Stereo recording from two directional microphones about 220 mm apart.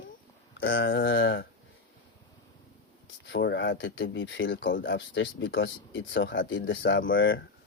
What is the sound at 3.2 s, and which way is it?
Speech, 55° left (ahead or behind).